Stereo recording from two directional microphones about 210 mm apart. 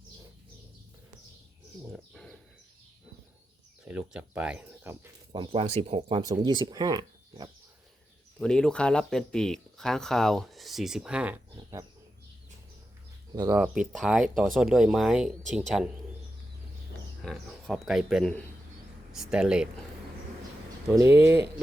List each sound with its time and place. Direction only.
1.9 s bird: centre (ahead or behind)
3.8 s speech: 5° right (ahead or behind)
5.3 s speech: 25° right (ahead or behind)
8.4 s speech: 5° left (ahead or behind)
13.3 s speech: 15° right (ahead or behind)
13.6 s speech: centre (ahead or behind)
17.2 s speech: centre (ahead or behind)
20.8 s speech: 15° right (ahead or behind)